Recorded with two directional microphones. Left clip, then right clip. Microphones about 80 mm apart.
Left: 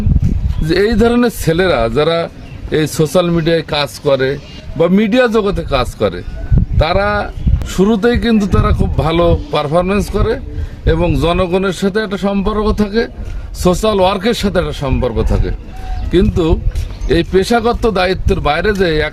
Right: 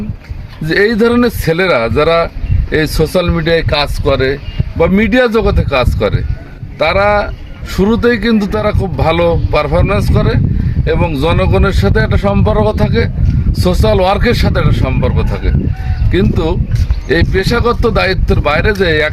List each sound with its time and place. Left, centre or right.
0.7 s a man's voice: left